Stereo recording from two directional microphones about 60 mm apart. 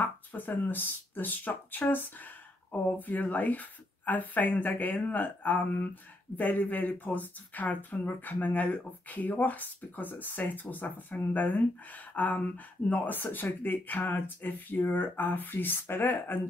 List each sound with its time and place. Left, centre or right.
0.0 s speech: left